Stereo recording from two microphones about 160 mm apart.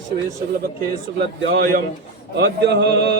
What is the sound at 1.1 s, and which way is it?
Speech, 65° right (ahead or behind).